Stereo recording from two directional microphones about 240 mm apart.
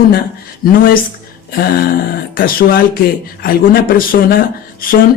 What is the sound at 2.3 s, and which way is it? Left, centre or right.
Speech, left.